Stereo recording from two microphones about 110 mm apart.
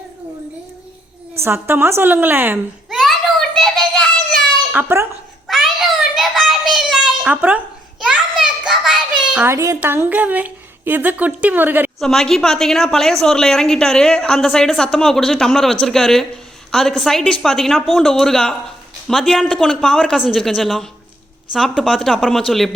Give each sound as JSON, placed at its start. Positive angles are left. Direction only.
{"t": 1.4, "sound": "a woman's voice", "side_deg": -20}
{"t": 2.9, "sound": "children playing", "side_deg": 0}
{"t": 4.7, "sound": "speech", "side_deg": -20}
{"t": 5.5, "sound": "a sound", "side_deg": 0}
{"t": 6.1, "sound": "child singing", "side_deg": 0}
{"t": 7.3, "sound": "a sound", "side_deg": -15}
{"t": 9.4, "sound": "a woman's voice", "side_deg": -25}
{"t": 11.9, "sound": "a woman's voice", "side_deg": 5}